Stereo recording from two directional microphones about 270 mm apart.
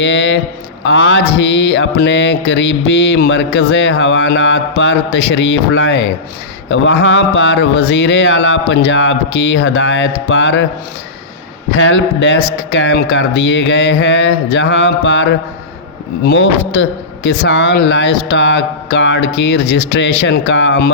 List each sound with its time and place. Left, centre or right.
0.0 s mantra: left
6.7 s speech: left
11.8 s mantra: left